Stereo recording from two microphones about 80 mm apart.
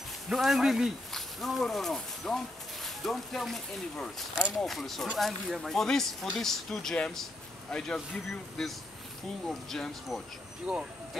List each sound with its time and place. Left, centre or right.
0.3 s a man's voice: centre